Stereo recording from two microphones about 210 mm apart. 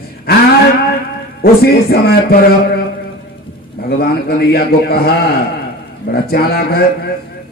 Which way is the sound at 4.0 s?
45° left (ahead or behind).